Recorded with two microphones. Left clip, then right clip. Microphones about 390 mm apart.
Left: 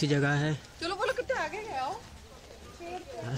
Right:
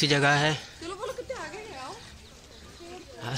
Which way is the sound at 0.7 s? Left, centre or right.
Left.